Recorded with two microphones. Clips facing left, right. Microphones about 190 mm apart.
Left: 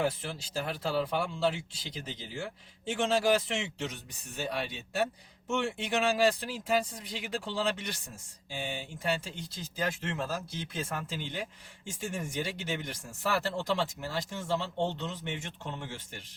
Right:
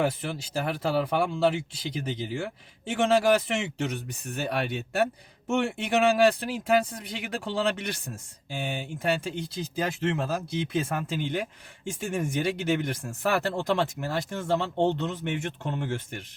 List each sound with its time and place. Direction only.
0.0 s speech: 65° right (ahead or behind)